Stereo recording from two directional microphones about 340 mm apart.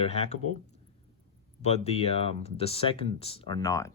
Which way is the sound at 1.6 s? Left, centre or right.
Centre.